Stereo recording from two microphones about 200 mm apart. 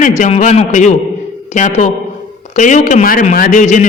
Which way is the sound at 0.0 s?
35° left (ahead or behind).